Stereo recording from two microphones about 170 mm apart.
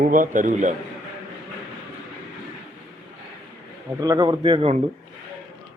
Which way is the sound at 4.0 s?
20° right (ahead or behind).